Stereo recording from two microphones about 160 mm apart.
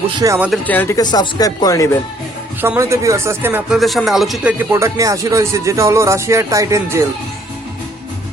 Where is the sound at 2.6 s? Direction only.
15° right (ahead or behind).